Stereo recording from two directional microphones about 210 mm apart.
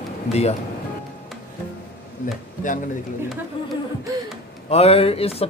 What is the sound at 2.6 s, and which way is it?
Speech, 40° left (ahead or behind).